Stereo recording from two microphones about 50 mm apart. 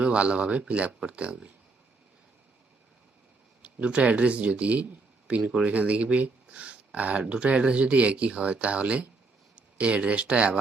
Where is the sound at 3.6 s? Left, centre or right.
Right.